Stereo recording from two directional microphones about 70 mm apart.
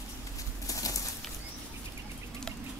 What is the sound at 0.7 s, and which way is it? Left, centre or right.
Bird, left.